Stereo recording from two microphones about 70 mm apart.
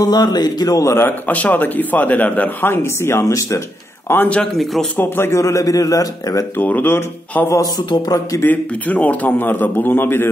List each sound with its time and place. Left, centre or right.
0.0 s a man's voice: left
0.7 s speech: left
1.0 s a man's voice: left
2.6 s speech: left
5.4 s a man's voice: left
6.6 s a man's voice: left
8.5 s a man's voice: left